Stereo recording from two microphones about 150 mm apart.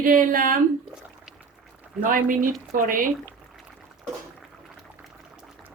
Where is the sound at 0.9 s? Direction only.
5° right (ahead or behind).